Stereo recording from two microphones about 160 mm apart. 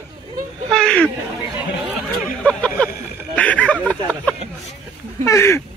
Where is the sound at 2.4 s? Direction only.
10° left (ahead or behind).